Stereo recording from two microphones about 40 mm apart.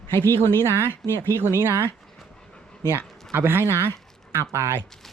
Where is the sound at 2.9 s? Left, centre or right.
Right.